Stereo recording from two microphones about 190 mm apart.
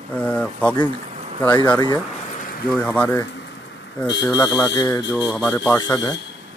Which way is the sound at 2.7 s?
10° left (ahead or behind).